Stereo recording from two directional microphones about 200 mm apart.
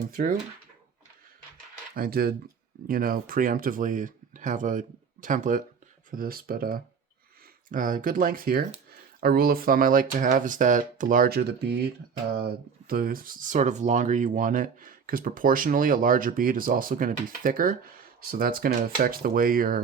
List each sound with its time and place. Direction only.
0.1 s speech: 45° right (ahead or behind)
2.0 s speech: 50° right (ahead or behind)
12.9 s speech: 45° right (ahead or behind)